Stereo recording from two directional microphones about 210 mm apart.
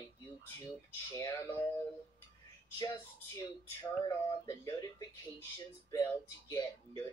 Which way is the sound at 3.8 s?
15° left (ahead or behind).